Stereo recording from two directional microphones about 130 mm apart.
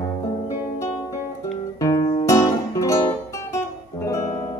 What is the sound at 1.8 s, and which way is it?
Music, 30° left (ahead or behind).